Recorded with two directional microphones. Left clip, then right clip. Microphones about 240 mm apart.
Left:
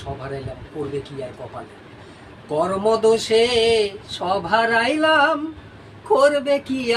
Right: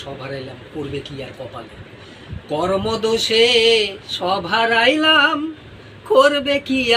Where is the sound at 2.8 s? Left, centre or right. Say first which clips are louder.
Left 2 dB; centre.